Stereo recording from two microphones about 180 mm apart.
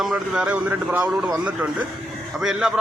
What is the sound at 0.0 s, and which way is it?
A man's voice, 5° right (ahead or behind).